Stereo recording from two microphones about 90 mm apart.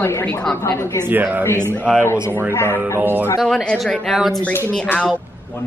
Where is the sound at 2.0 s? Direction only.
25° left (ahead or behind).